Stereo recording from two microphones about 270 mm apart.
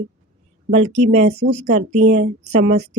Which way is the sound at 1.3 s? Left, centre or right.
Right.